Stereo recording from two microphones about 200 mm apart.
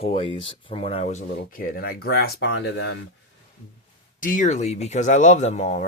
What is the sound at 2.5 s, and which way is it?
Speech, 60° left (ahead or behind).